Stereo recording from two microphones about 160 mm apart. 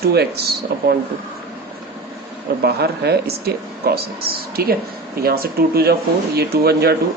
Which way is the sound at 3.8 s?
75° right (ahead or behind).